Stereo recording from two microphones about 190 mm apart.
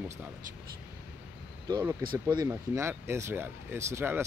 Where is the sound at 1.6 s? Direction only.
20° right (ahead or behind).